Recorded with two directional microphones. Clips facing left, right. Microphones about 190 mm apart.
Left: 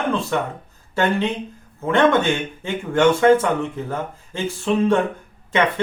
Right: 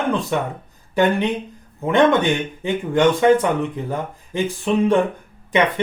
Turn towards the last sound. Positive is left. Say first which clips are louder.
# right 2 dB
turn(degrees=-15)  # may be behind; listen again after turning